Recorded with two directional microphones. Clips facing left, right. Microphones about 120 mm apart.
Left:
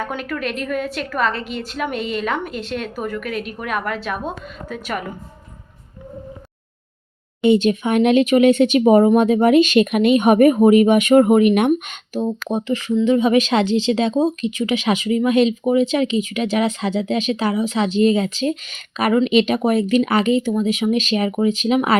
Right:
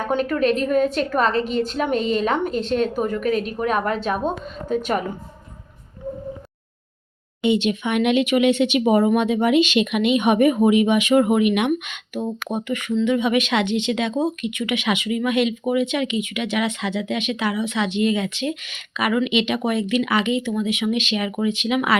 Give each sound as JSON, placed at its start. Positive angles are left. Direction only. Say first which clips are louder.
{"t": 0.1, "sound": "a woman's voice", "louder": "right 6 dB", "side_deg": -30}
{"t": 7.4, "sound": "speech", "louder": "left 5 dB", "side_deg": 45}